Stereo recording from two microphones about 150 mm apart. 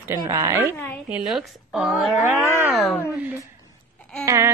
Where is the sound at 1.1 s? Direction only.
Centre (ahead or behind).